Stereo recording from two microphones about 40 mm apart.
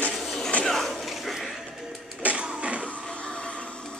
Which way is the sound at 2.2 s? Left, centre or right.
Right.